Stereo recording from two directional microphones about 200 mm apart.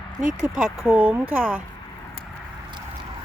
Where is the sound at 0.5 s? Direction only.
5° right (ahead or behind).